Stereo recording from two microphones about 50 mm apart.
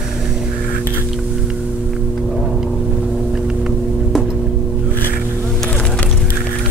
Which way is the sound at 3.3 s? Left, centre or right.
Centre.